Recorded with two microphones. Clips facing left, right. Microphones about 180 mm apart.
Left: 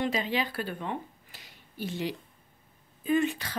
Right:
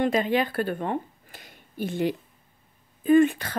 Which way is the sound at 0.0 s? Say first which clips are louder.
Right 6 dB; 55° right (ahead or behind).